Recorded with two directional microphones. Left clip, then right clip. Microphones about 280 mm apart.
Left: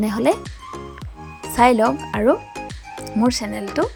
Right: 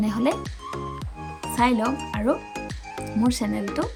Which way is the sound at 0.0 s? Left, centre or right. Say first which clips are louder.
Left 6 dB; centre.